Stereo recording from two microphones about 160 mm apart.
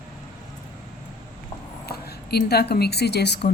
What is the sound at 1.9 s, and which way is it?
A woman's voice, 85° left.